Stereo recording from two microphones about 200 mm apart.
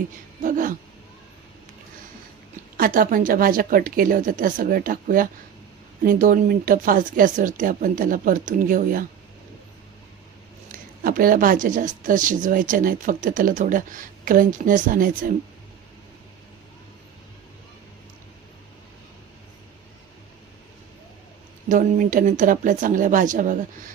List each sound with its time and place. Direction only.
0.4 s speech: 40° right (ahead or behind)
2.7 s speech: 45° right (ahead or behind)
10.7 s speech: 45° right (ahead or behind)
21.7 s speech: 40° right (ahead or behind)